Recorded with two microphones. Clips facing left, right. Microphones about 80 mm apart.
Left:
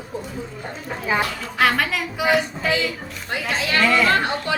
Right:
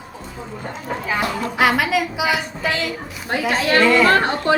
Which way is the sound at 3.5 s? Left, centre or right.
Right.